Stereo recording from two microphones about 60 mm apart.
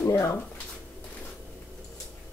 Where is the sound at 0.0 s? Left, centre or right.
Left.